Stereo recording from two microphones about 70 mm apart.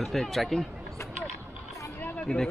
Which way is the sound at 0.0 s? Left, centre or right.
Centre.